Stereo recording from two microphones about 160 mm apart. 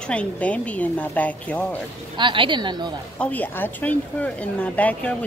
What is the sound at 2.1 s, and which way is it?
Speech, 30° right (ahead or behind).